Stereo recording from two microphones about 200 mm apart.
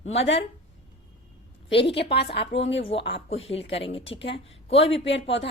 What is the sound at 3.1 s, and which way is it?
Speech, 25° left (ahead or behind).